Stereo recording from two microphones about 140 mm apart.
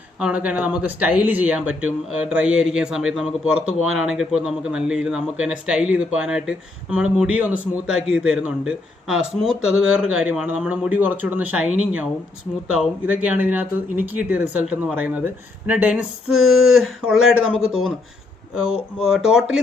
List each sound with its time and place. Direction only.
0.2 s a man's voice: 10° right (ahead or behind)